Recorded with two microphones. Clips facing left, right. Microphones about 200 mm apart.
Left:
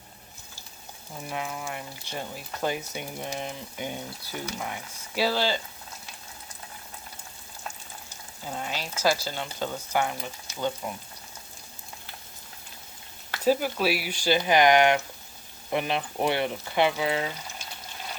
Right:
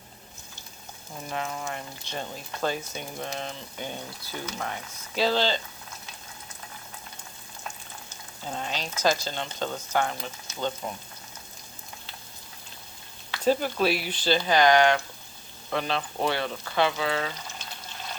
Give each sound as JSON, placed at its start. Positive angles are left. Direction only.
{"t": 1.3, "sound": "speech", "side_deg": 10}
{"t": 8.4, "sound": "speech", "side_deg": 10}
{"t": 13.4, "sound": "speech", "side_deg": 10}